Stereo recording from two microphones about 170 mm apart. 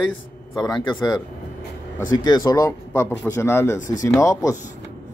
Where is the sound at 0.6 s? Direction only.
25° left (ahead or behind).